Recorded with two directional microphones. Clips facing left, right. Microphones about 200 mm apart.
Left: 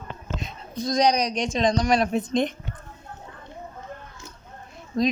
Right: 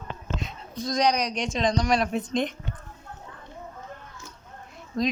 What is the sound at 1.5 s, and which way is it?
Speech, 45° left (ahead or behind).